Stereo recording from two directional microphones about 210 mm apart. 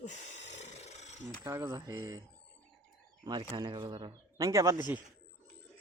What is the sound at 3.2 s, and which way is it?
Speech, 20° right (ahead or behind).